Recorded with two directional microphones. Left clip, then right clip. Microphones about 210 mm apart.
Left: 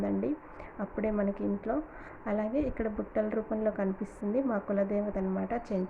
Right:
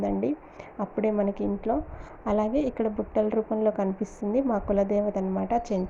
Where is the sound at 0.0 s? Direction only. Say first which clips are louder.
Right 5 dB; 10° right (ahead or behind).